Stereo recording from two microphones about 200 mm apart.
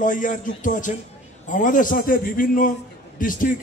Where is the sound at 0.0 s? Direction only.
40° left (ahead or behind).